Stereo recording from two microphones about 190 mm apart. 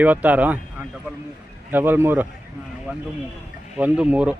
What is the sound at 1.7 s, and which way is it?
Speech, 10° right (ahead or behind).